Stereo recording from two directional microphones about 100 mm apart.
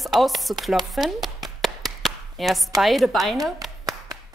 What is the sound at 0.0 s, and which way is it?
Chopping, centre (ahead or behind).